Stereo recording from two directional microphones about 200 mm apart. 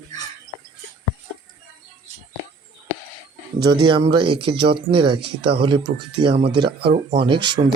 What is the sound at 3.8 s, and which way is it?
Speech, 25° right (ahead or behind).